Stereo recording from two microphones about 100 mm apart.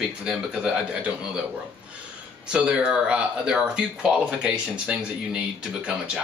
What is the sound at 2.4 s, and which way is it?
Speech, 10° right (ahead or behind).